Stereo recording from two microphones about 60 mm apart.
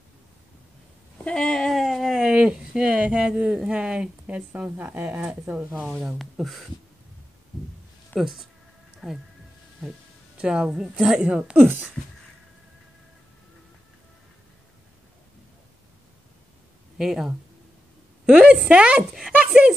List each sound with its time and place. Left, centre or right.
1.3 s a sound: centre
1.7 s a sound: centre
4.6 s speech: right
6.1 s speech: centre
8.1 s speech: centre
10.3 s speech: centre
11.5 s speech: right
17.0 s a woman's voice: centre